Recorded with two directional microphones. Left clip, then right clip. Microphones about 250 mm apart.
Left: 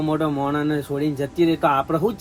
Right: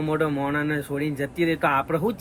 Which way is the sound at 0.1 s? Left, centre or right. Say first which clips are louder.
Even; centre.